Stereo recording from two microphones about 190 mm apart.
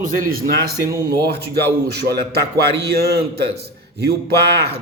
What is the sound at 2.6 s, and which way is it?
Speech, 55° right (ahead or behind).